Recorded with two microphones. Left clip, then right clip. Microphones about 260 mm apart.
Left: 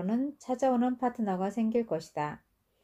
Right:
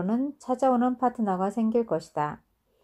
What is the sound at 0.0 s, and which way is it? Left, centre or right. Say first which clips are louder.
Speech: right 4 dB; right.